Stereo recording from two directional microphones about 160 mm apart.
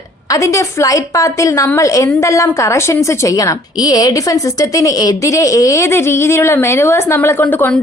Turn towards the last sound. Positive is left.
turn(degrees=10)  # may be behind; listen again after turning